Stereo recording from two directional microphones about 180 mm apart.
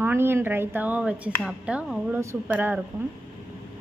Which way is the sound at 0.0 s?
10° right (ahead or behind).